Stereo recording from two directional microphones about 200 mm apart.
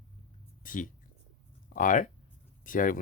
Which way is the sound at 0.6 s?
40° left (ahead or behind).